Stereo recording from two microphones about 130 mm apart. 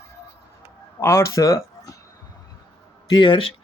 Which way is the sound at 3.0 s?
35° left (ahead or behind).